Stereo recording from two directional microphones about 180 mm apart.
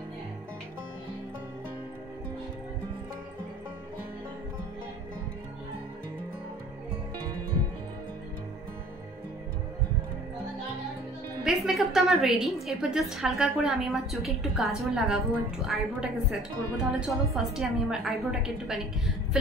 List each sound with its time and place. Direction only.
11.4 s a woman's voice: centre (ahead or behind)